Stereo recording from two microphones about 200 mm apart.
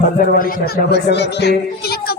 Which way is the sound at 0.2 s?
45° left (ahead or behind).